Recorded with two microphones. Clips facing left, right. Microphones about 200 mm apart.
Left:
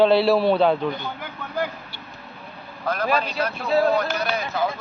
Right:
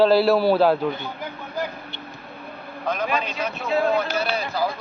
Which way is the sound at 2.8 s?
10° left (ahead or behind).